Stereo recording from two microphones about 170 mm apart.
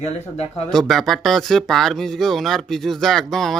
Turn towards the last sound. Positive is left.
turn(degrees=0)  # may be behind; listen again after turning